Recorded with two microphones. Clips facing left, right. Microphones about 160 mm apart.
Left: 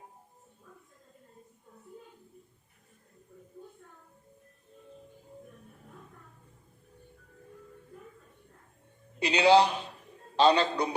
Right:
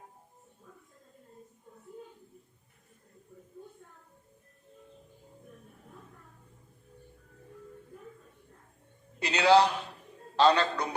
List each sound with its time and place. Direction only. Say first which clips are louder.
9.1 s a man's voice: left 1 dB; 20° left (ahead or behind)